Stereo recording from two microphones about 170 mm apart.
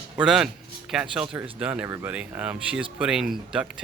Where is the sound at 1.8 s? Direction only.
20° right (ahead or behind).